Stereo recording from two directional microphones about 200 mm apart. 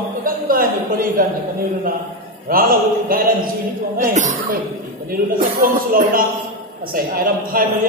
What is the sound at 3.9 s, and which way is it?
A man's voice, 40° right (ahead or behind).